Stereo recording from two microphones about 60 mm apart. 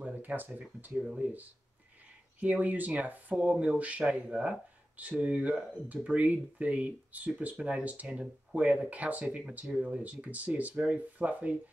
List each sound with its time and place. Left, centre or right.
0.0 s a sound: right
0.6 s speech: right
0.9 s speech: centre
2.4 s speech: right